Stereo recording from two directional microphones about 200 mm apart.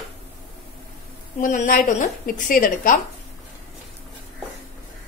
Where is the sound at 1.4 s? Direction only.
40° left (ahead or behind).